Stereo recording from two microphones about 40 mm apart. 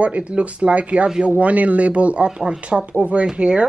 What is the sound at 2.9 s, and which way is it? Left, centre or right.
Speech, right.